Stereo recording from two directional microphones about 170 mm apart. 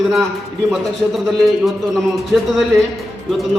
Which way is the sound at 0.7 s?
Centre (ahead or behind).